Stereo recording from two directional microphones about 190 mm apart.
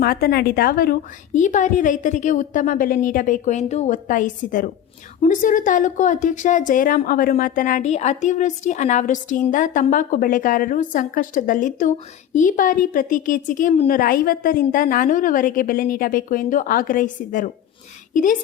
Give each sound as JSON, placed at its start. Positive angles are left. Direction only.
{"t": 0.0, "sound": "a woman's voice", "side_deg": 55}